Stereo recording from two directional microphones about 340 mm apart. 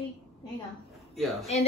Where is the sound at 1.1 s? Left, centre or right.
Centre.